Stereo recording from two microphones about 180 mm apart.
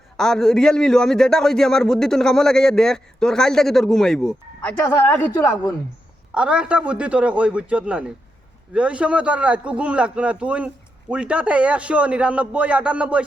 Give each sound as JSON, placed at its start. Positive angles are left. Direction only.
{"t": 0.2, "sound": "a man's voice", "side_deg": 0}
{"t": 4.8, "sound": "a woman's voice", "side_deg": 15}
{"t": 6.3, "sound": "a man's voice", "side_deg": -5}